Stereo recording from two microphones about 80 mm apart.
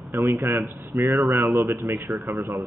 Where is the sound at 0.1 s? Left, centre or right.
Right.